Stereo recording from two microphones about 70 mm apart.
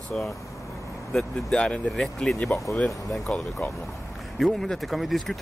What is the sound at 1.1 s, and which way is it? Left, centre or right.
Speech, centre.